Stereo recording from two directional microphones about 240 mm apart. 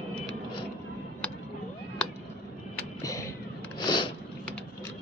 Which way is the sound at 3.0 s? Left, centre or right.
Centre.